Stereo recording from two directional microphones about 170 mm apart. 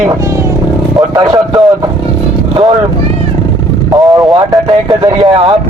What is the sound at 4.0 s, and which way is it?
Speech, 20° right (ahead or behind).